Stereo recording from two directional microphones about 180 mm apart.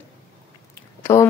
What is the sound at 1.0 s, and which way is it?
Speech, 15° left (ahead or behind).